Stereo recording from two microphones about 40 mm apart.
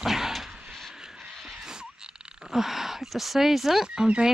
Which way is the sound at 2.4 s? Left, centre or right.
Centre.